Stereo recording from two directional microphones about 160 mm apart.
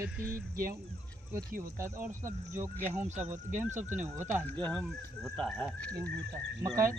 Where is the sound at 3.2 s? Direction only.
50° right (ahead or behind).